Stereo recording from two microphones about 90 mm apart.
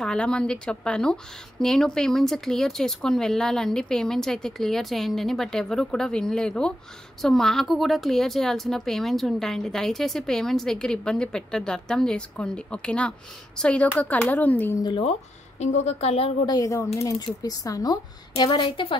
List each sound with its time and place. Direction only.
0.0 s a woman's voice: 10° left (ahead or behind)
16.4 s speech: 40° left (ahead or behind)
18.4 s a woman's voice: 60° left (ahead or behind)